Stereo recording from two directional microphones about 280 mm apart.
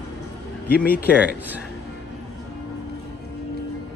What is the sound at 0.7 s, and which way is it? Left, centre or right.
Speech, left.